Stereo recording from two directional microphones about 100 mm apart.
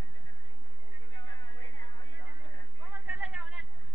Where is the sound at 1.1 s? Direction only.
50° left (ahead or behind).